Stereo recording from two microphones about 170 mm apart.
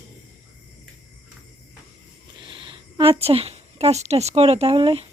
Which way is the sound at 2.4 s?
30° right (ahead or behind).